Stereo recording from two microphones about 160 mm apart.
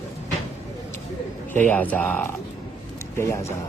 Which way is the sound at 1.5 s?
10° left (ahead or behind).